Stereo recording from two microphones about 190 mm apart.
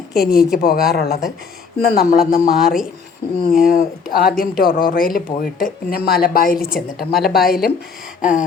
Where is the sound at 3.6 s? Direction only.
50° left (ahead or behind).